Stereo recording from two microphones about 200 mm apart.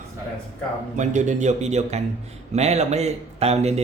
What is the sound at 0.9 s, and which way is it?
A man's voice, 40° right (ahead or behind).